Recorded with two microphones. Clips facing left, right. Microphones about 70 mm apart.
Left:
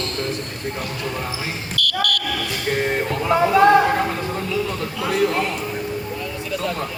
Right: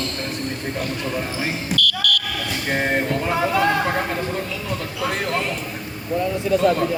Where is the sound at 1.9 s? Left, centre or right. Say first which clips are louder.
Even; left.